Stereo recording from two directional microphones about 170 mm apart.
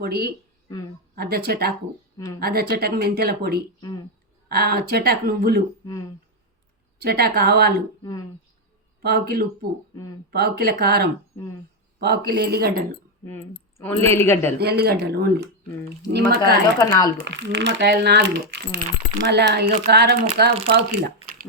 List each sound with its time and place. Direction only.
0.0 s speech: 70° right (ahead or behind)
7.0 s speech: 65° right (ahead or behind)
9.0 s speech: 70° right (ahead or behind)
13.2 s speech: 15° left (ahead or behind)
14.6 s speech: 70° right (ahead or behind)
16.4 s speech: 20° left (ahead or behind)
17.2 s speech: 90° right; by 20.8 s 70° right (ahead or behind)